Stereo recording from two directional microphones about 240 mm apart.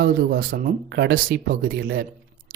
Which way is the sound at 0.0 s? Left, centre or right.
Right.